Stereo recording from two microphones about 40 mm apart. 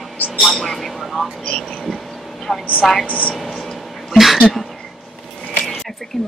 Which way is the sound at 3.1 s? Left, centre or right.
Left.